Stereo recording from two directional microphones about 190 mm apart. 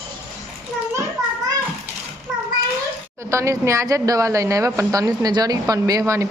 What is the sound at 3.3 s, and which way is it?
A woman's voice, 15° right (ahead or behind).